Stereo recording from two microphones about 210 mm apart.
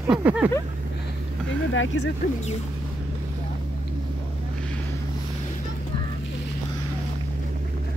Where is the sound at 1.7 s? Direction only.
65° left (ahead or behind).